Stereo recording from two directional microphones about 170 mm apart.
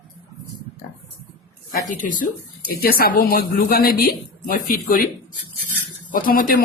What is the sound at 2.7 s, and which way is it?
A man's voice, 65° left (ahead or behind).